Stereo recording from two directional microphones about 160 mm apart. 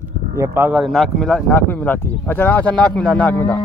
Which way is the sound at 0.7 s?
Centre (ahead or behind).